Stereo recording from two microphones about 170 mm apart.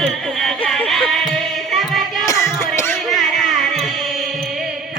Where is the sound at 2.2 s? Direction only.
20° left (ahead or behind).